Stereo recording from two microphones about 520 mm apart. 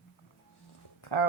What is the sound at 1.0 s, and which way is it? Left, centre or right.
Speech, left.